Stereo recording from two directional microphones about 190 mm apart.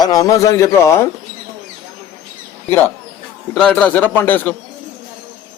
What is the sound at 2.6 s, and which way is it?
A man's voice, 10° left (ahead or behind).